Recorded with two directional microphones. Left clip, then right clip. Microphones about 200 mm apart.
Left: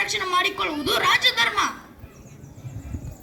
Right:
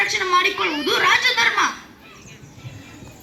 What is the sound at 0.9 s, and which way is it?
Chuckle, 55° left (ahead or behind).